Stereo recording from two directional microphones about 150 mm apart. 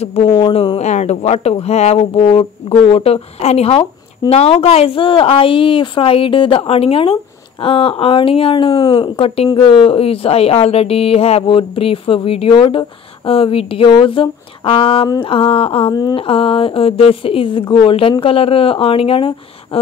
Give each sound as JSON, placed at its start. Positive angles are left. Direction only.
{"t": 0.0, "sound": "speech", "side_deg": 45}
{"t": 0.3, "sound": "speech", "side_deg": 30}
{"t": 0.7, "sound": "speech", "side_deg": 50}
{"t": 15.9, "sound": "speech", "side_deg": 25}